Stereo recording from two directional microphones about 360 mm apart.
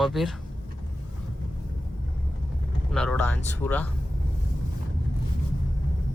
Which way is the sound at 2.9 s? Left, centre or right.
Centre.